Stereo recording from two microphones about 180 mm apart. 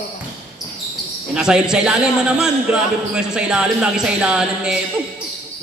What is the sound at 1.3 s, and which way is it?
A man's voice, 5° right (ahead or behind).